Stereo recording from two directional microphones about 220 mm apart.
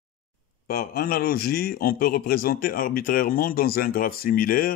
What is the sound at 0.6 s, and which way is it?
Speech, 40° left (ahead or behind).